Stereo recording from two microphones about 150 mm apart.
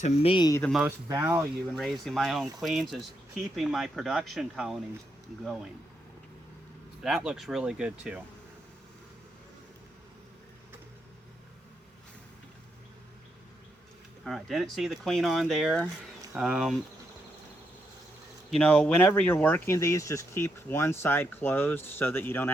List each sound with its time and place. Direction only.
0.0 s speech: 40° left (ahead or behind)
0.8 s speech: 15° right (ahead or behind)
1.7 s speech: centre (ahead or behind)
7.0 s speech: 5° right (ahead or behind)
14.3 s speech: centre (ahead or behind)
18.5 s speech: 5° left (ahead or behind)